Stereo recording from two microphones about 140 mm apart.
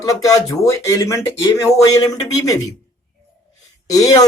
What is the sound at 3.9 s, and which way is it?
Speech, 25° left (ahead or behind).